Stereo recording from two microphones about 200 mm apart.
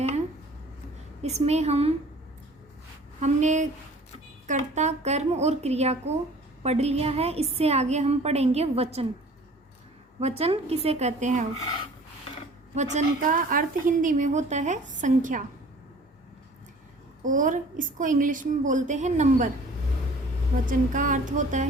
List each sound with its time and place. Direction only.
1.2 s a woman's voice: 35° right (ahead or behind)
3.2 s a woman's voice: 35° right (ahead or behind)
10.2 s a woman's voice: 30° right (ahead or behind)
12.7 s a woman's voice: 35° right (ahead or behind)
17.2 s a woman's voice: 40° right (ahead or behind)
20.7 s a woman's voice: 40° right (ahead or behind)